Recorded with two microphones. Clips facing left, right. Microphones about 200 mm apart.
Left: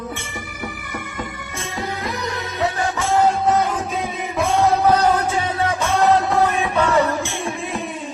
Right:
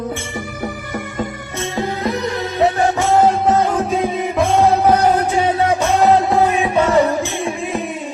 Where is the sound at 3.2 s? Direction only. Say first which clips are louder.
Right 2 dB; 25° right (ahead or behind).